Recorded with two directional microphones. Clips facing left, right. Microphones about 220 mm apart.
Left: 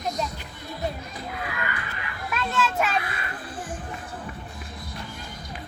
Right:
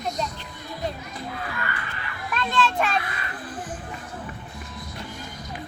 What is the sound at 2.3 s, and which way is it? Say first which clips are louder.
Children playing: right 2 dB; 5° left (ahead or behind).